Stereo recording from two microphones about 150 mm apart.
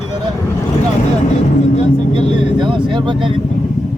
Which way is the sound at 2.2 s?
30° right (ahead or behind).